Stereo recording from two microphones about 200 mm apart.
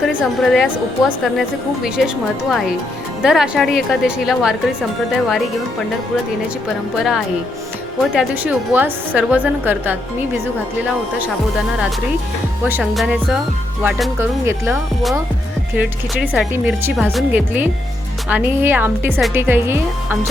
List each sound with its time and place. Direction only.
0.2 s a woman's voice: 5° left (ahead or behind)
6.9 s a woman's voice: centre (ahead or behind)
12.8 s a woman's voice: centre (ahead or behind)
14.6 s a woman's voice: centre (ahead or behind)